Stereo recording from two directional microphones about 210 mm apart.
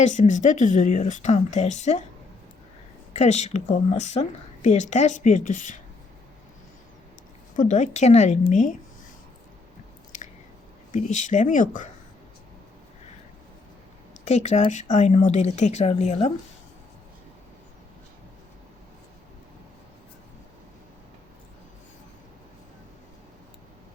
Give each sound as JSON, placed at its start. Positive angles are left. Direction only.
{"t": 0.0, "sound": "speech", "side_deg": 35}
{"t": 3.1, "sound": "speech", "side_deg": 30}
{"t": 7.5, "sound": "speech", "side_deg": 35}
{"t": 10.1, "sound": "chewing", "side_deg": 40}
{"t": 10.9, "sound": "speech", "side_deg": 35}
{"t": 14.3, "sound": "speech", "side_deg": 35}